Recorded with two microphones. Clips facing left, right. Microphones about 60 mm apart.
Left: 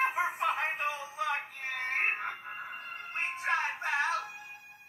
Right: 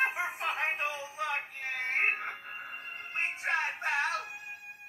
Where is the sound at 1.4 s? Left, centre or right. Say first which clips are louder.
Right 1 dB; right.